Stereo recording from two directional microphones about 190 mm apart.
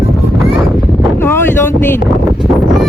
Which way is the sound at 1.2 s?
10° left (ahead or behind).